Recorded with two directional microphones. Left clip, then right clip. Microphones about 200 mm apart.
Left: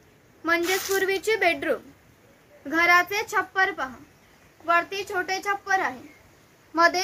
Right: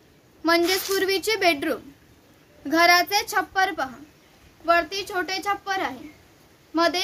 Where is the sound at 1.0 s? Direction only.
65° right (ahead or behind).